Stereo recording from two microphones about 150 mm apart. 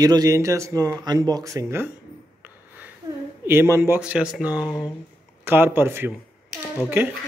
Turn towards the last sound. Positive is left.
turn(degrees=-15)  # may be behind; listen again after turning